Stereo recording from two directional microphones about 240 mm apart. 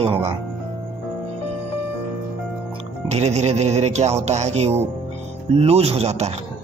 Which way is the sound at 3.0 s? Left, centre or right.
Right.